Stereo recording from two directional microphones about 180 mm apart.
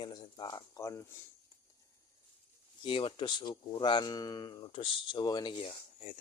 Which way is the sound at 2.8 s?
30° left (ahead or behind).